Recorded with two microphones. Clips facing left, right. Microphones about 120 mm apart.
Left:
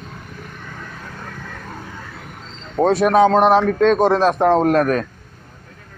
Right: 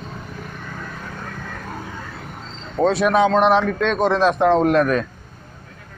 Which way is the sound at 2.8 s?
45° left (ahead or behind).